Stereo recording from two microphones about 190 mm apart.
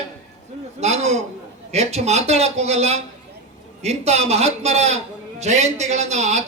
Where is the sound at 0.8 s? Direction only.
35° right (ahead or behind).